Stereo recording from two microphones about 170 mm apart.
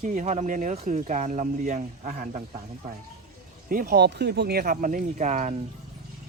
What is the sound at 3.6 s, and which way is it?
Speech, 55° right (ahead or behind).